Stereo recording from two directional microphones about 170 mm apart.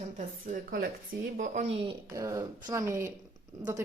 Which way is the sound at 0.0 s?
50° right (ahead or behind).